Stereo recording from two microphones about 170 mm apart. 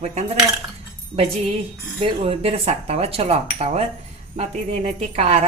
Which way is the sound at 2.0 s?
35° right (ahead or behind).